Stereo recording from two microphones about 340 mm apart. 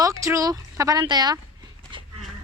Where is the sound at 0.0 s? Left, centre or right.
Centre.